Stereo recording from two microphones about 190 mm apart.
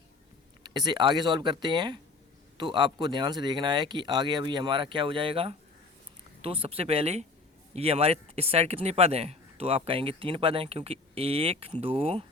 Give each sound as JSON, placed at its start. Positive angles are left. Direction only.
{"t": 0.6, "sound": "speech", "side_deg": -20}